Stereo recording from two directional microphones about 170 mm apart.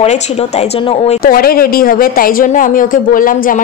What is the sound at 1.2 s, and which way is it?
Speech, 60° left (ahead or behind).